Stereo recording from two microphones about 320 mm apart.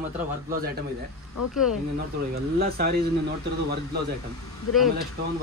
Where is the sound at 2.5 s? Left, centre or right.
Right.